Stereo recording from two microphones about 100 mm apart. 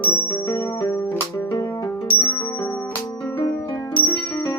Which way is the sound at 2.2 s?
20° left (ahead or behind).